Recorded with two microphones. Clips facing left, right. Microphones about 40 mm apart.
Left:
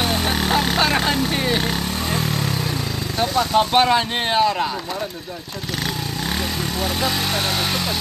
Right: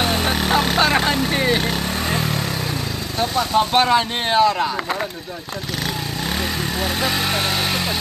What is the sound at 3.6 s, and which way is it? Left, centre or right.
Speech, centre.